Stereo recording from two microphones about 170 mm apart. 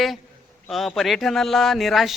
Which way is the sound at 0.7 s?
Centre (ahead or behind).